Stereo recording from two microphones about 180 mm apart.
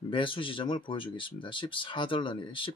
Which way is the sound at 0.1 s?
30° left (ahead or behind).